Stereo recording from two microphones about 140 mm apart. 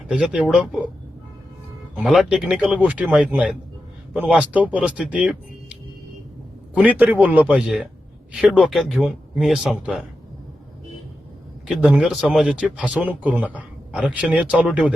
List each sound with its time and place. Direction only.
0.1 s speech: 5° right (ahead or behind)
2.0 s speech: centre (ahead or behind)
6.7 s speech: 10° right (ahead or behind)
11.7 s speech: 5° right (ahead or behind)